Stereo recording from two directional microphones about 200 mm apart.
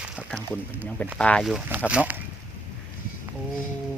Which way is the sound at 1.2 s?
5° left (ahead or behind).